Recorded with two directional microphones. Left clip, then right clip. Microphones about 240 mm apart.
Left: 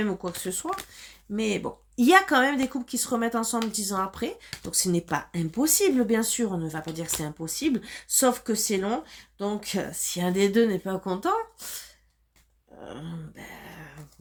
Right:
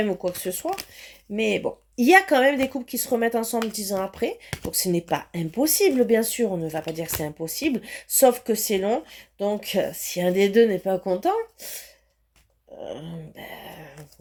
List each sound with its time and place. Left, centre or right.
0.2 s speech: centre
12.8 s speech: centre